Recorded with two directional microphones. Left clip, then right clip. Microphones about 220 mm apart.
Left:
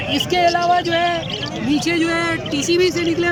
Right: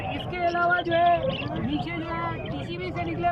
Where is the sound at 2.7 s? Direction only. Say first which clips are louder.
Left 16 dB; 25° left (ahead or behind).